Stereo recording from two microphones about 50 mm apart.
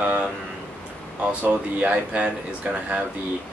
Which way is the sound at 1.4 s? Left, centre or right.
Right.